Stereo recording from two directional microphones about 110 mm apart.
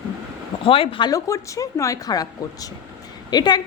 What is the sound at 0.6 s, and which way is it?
Speech, 55° left (ahead or behind).